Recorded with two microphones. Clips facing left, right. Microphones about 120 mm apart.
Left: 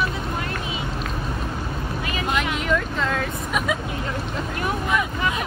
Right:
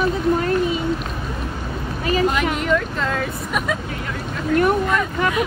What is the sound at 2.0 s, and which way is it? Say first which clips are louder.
Speech: right 13 dB; 40° right (ahead or behind).